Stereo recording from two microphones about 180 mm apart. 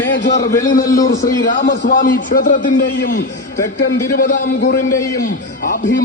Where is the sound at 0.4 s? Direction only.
20° left (ahead or behind).